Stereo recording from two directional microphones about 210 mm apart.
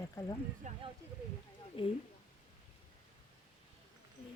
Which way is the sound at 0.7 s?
35° right (ahead or behind).